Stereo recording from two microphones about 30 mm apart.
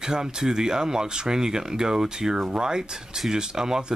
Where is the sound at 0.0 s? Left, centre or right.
Right.